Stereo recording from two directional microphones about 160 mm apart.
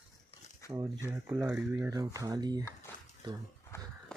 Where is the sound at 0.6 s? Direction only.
20° left (ahead or behind).